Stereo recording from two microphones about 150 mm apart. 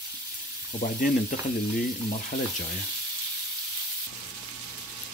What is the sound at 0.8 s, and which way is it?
Frying, 65° left (ahead or behind).